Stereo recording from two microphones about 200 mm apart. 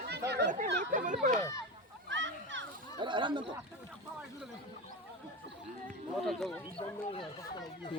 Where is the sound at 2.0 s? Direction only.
65° right (ahead or behind).